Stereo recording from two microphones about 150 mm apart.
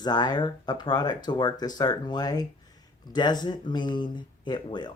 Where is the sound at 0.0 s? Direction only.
30° left (ahead or behind).